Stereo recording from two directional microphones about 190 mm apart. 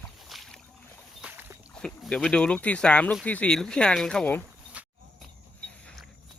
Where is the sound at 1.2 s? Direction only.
10° right (ahead or behind).